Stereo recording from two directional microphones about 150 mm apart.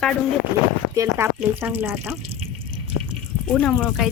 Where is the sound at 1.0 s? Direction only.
15° right (ahead or behind).